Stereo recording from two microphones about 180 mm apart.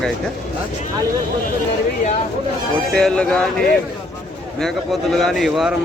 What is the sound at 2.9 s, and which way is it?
Speech, 5° left (ahead or behind).